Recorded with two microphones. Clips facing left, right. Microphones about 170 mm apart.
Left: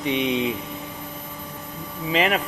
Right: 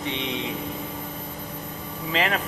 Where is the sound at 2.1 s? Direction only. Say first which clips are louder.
Left 4 dB; 20° left (ahead or behind).